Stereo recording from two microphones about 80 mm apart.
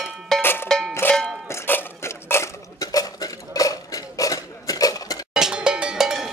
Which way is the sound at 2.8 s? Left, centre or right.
Left.